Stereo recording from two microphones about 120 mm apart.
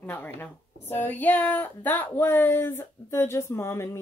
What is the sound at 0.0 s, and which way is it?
A woman's voice, 15° left (ahead or behind).